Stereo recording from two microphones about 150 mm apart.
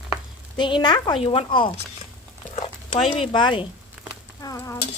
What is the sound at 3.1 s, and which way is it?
Speech, 35° left (ahead or behind).